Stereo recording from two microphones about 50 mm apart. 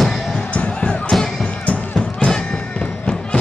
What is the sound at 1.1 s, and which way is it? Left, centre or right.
Music, centre.